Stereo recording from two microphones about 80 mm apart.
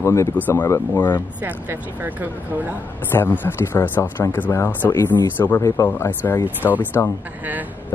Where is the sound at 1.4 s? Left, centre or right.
Right.